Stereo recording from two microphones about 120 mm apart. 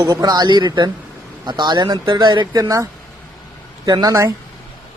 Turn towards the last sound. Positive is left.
turn(degrees=-30)  # may be behind; listen again after turning